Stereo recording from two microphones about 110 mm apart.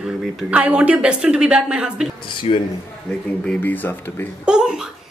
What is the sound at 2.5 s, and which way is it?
Speech, 85° left.